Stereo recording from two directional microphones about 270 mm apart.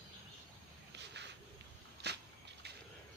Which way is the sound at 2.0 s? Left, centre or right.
Right.